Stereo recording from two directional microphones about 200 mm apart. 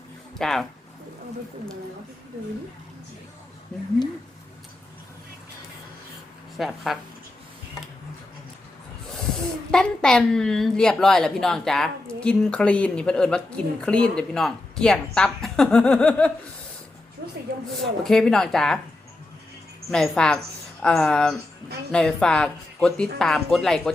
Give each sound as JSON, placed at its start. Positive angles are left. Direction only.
{"t": 0.3, "sound": "a woman's voice", "side_deg": 0}
{"t": 6.6, "sound": "a woman's voice", "side_deg": 0}
{"t": 9.7, "sound": "a woman's voice", "side_deg": 5}
{"t": 17.2, "sound": "a sound", "side_deg": -55}
{"t": 18.0, "sound": "a woman's voice", "side_deg": 0}
{"t": 19.9, "sound": "a woman's voice", "side_deg": 5}